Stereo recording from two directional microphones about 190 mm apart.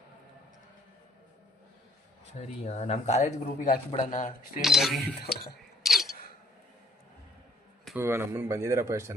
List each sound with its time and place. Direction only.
2.4 s speech: 35° left (ahead or behind)
4.6 s speech: centre (ahead or behind)
5.8 s single-lens reflex camera: centre (ahead or behind)
7.9 s speech: 10° right (ahead or behind)